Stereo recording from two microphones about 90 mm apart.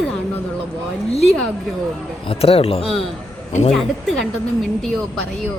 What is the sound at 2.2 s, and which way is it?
Speech, 90° left.